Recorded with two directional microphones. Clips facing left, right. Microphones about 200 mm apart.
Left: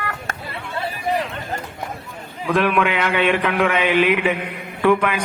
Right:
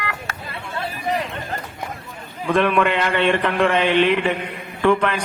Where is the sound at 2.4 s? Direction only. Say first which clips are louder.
Right 1 dB; centre (ahead or behind).